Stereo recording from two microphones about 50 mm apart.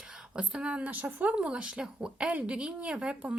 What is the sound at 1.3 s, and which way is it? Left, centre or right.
Speech, centre.